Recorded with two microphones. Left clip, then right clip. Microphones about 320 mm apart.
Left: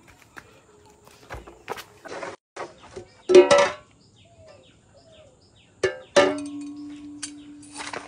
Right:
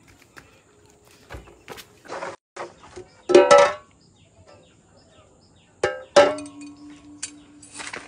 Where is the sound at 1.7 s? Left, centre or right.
Centre.